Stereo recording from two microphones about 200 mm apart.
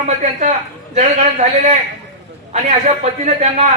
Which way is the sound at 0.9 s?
35° right (ahead or behind).